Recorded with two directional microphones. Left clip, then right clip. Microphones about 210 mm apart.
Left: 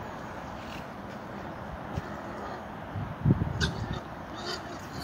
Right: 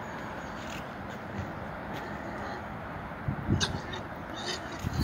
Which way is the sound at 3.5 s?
50° right (ahead or behind).